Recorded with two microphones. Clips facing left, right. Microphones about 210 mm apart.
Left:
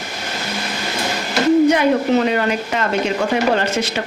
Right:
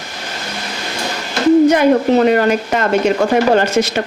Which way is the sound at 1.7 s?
50° right (ahead or behind).